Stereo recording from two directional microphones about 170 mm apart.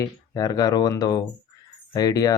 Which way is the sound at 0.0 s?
20° left (ahead or behind).